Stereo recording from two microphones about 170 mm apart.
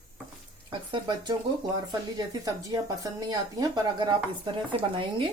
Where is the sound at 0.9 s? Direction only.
25° right (ahead or behind).